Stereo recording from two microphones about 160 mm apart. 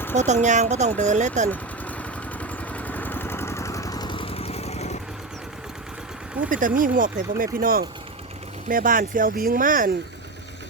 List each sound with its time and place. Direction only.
0.2 s speech: 50° right (ahead or behind)
1.5 s vehicle: 10° left (ahead or behind); by 4.9 s 40° left (ahead or behind)
6.5 s speech: 55° right (ahead or behind)